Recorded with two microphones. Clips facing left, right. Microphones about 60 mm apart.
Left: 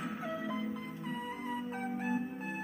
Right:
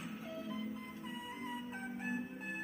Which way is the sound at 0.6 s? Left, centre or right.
Left.